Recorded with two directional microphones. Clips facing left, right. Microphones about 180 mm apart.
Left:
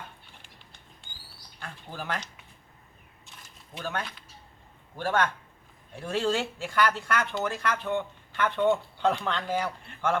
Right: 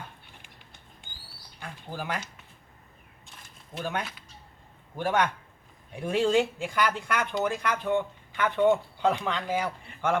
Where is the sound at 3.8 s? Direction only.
10° right (ahead or behind).